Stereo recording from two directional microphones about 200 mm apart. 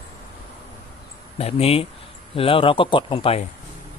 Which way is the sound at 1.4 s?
30° left (ahead or behind).